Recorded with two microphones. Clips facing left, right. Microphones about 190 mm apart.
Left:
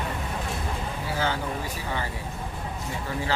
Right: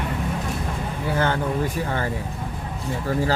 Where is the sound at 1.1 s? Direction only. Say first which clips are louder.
Right 5 dB; 55° right (ahead or behind).